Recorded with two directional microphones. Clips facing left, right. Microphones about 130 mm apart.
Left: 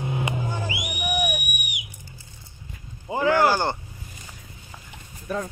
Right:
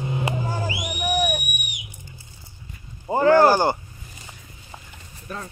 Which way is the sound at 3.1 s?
40° right (ahead or behind).